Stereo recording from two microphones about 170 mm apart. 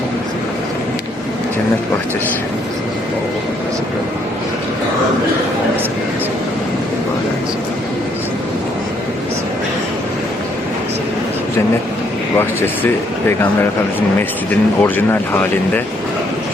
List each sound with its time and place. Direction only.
12.4 s speech: 10° left (ahead or behind)